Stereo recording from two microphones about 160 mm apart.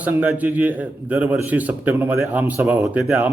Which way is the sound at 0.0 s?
10° right (ahead or behind).